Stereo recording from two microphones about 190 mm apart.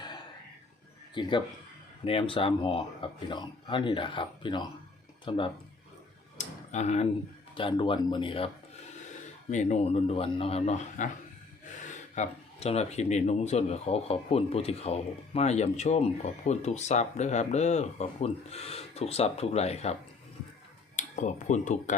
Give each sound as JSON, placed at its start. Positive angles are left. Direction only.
{"t": 1.1, "sound": "speech", "side_deg": 25}
{"t": 6.3, "sound": "a sound", "side_deg": 40}
{"t": 7.5, "sound": "speech", "side_deg": 25}
{"t": 9.5, "sound": "speech", "side_deg": 40}